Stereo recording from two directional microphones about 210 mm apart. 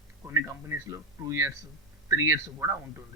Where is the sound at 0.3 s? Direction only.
15° right (ahead or behind).